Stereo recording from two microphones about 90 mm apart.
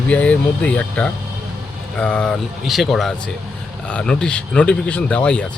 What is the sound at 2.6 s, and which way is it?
Speech, centre (ahead or behind).